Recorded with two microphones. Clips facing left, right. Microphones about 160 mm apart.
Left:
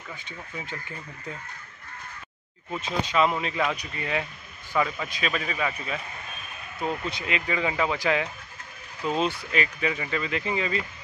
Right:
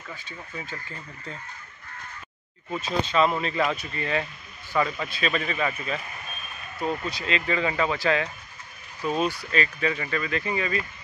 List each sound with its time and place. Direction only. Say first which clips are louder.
0.1 s speech: even; 15° left (ahead or behind)
2.8 s a man's voice: right 1 dB; 10° left (ahead or behind)
7.1 s speech: right 2 dB; 15° left (ahead or behind)